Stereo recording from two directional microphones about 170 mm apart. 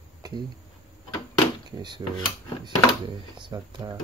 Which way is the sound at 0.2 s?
25° right (ahead or behind).